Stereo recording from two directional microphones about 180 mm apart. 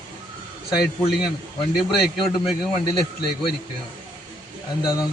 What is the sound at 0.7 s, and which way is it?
Speech, 60° left (ahead or behind).